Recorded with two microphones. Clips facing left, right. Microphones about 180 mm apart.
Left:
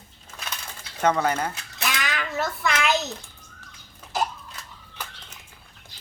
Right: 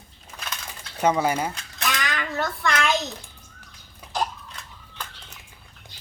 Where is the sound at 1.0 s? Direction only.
10° right (ahead or behind).